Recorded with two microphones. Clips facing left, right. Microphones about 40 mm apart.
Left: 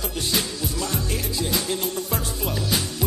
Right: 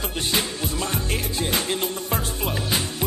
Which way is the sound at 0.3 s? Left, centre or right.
Right.